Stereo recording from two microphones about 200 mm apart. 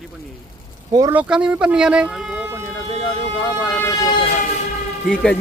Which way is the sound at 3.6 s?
20° left (ahead or behind).